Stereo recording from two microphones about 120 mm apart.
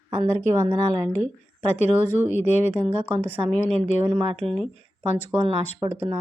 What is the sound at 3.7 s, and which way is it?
Speech, 75° left (ahead or behind).